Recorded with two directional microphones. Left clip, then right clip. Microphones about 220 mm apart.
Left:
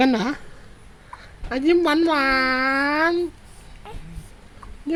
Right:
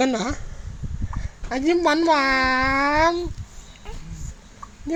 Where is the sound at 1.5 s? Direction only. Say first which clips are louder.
Left 1 dB; 5° left (ahead or behind).